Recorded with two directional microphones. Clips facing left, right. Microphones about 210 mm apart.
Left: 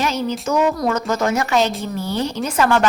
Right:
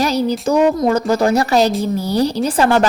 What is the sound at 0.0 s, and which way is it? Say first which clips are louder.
A woman's voice: right 5 dB; 35° right (ahead or behind).